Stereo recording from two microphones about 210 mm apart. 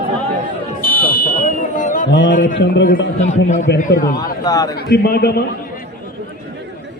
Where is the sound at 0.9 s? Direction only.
40° left (ahead or behind).